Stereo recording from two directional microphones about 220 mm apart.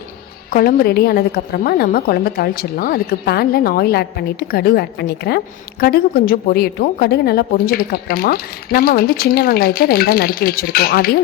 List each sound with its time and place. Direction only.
0.5 s a woman's voice: 45° left (ahead or behind)